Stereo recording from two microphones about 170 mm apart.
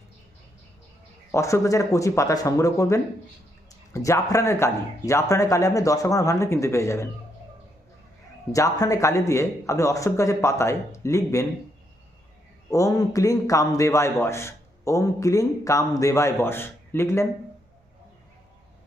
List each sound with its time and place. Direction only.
1.3 s a man's voice: 15° left (ahead or behind)
8.5 s a man's voice: 20° left (ahead or behind)
12.7 s a man's voice: 20° left (ahead or behind)